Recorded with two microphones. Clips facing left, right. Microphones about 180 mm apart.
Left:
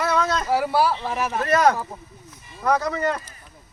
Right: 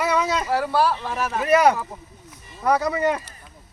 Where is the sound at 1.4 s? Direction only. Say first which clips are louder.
Right 2 dB; 10° right (ahead or behind).